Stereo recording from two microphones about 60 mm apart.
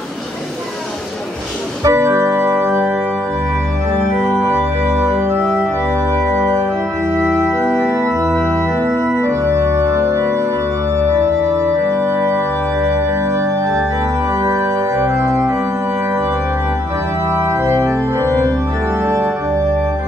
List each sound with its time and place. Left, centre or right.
1.9 s music: right
7.4 s organ: centre
9.2 s organ: right
14.4 s organ: right
17.6 s organ: right